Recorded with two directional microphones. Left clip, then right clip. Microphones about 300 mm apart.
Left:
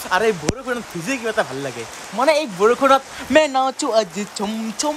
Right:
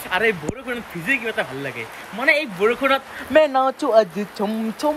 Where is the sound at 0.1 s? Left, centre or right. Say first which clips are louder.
Left 2 dB; centre.